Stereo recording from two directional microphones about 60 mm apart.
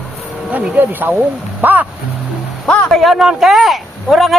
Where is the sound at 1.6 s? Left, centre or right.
Right.